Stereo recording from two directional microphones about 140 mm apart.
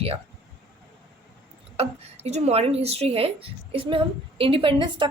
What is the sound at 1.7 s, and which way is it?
A woman's voice, 50° right (ahead or behind).